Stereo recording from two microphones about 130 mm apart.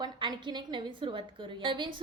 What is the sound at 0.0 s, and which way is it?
A woman's voice, 35° right (ahead or behind).